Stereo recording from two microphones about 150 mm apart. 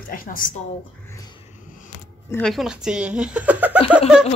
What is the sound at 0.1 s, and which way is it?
Speech, 70° left (ahead or behind).